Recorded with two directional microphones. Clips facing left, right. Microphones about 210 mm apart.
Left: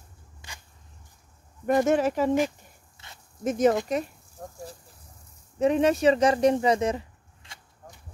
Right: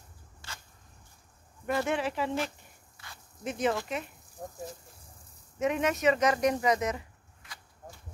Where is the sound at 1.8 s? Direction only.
45° left (ahead or behind).